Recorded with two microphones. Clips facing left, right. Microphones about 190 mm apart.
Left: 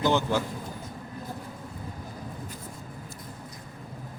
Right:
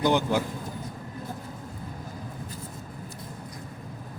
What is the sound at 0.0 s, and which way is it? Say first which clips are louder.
Speech: right 1 dB; 15° right (ahead or behind).